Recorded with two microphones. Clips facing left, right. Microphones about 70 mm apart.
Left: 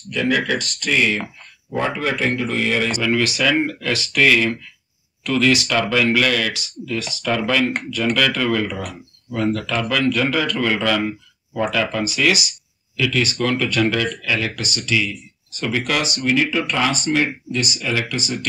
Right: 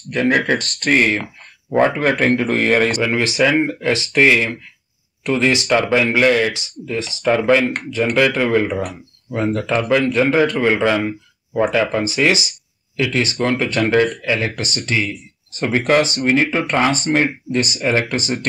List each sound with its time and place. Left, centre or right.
0.1 s a man's voice: right
3.0 s speech: right